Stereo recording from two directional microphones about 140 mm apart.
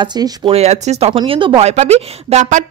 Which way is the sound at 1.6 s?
50° right (ahead or behind).